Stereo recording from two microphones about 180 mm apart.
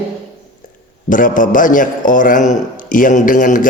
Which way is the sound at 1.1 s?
45° left (ahead or behind).